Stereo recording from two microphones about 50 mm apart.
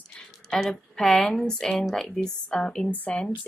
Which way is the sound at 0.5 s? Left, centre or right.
Centre.